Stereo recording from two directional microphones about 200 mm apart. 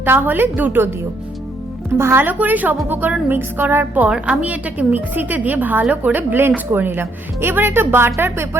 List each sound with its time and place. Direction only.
0.0 s a woman's voice: 10° right (ahead or behind)